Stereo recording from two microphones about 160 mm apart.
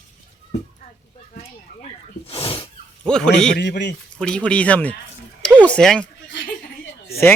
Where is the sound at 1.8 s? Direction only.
40° left (ahead or behind).